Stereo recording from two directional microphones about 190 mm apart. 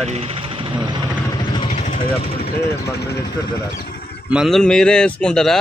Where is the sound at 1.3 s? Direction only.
25° left (ahead or behind).